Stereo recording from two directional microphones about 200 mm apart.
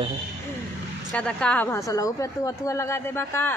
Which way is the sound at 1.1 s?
5° left (ahead or behind).